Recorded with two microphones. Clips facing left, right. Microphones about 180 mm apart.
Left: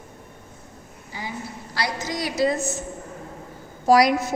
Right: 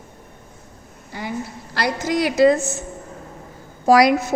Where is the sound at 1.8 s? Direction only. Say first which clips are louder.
Right 7 dB; 60° right (ahead or behind).